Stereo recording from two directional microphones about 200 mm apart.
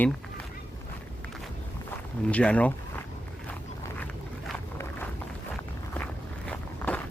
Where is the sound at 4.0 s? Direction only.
10° left (ahead or behind).